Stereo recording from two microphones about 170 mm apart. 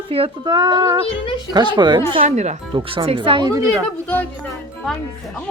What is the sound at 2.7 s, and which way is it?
Speech, 30° right (ahead or behind).